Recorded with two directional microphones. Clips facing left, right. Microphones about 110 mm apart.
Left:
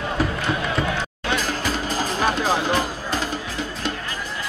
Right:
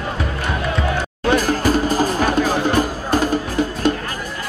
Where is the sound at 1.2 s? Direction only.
45° right (ahead or behind).